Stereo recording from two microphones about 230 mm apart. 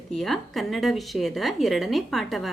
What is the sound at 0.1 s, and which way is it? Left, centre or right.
Speech, centre.